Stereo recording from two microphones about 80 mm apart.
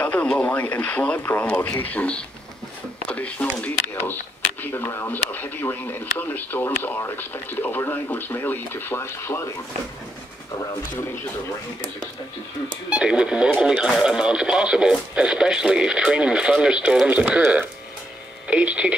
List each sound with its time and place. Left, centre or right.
0.0 s speech: centre
12.9 s speech: centre